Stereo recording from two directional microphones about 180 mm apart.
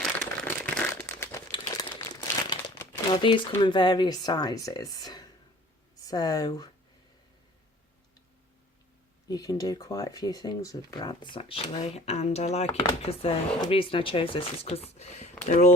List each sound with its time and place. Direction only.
0.0 s crumpling: 5° left (ahead or behind); by 1.9 s 25° left (ahead or behind)
2.0 s crumpling: 15° left (ahead or behind)
3.2 s speech: 25° left (ahead or behind)
9.3 s speech: 20° left (ahead or behind); by 15.7 s 45° left (ahead or behind)